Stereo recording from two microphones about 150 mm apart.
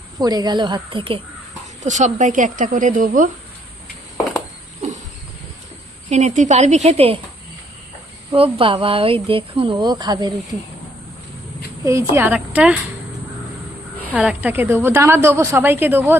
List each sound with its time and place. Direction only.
0.2 s speech: 25° right (ahead or behind)
1.8 s speech: 55° right (ahead or behind)
6.1 s a woman's voice: 50° right (ahead or behind)
8.3 s speech: 35° right (ahead or behind)
11.9 s a woman's voice: 20° right (ahead or behind)
14.2 s a woman's voice: 10° right (ahead or behind)